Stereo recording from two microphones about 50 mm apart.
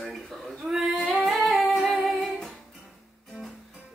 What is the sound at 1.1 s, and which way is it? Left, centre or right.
Humming, centre.